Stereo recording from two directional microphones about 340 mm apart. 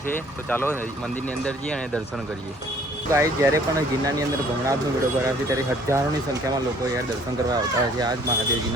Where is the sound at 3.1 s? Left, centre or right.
Centre.